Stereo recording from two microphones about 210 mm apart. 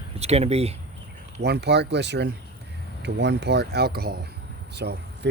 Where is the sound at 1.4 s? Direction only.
50° right (ahead or behind).